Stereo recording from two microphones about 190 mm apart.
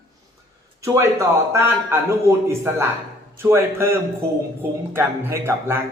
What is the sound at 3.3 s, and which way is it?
Speech, 15° right (ahead or behind).